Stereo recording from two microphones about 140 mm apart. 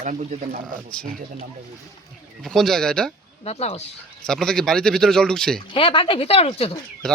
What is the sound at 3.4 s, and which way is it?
Speech, 45° left (ahead or behind).